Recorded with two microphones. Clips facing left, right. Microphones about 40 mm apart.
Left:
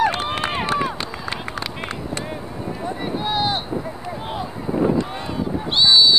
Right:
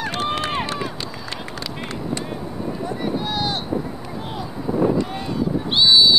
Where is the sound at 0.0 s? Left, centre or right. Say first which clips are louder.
Left 3 dB; left.